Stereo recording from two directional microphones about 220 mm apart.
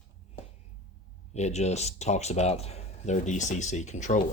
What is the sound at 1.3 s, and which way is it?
Speech, 30° left (ahead or behind).